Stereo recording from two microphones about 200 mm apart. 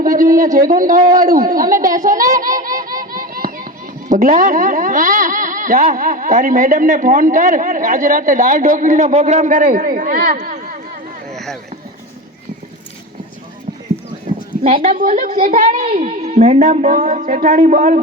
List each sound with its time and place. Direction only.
0.0 s a sound: 45° right (ahead or behind)
0.7 s speech: 45° right (ahead or behind)
3.0 s a sound: 45° right (ahead or behind)
4.1 s speech: 40° right (ahead or behind)
11.3 s rowboat: centre (ahead or behind)
14.6 s a woman's voice: 40° right (ahead or behind)
15.9 s speech: 30° right (ahead or behind)